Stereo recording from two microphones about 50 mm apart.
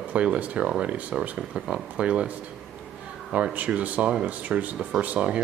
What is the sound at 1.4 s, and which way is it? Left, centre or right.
Speech, centre.